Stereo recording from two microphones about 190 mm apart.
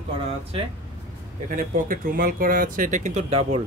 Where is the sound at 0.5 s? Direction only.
30° right (ahead or behind).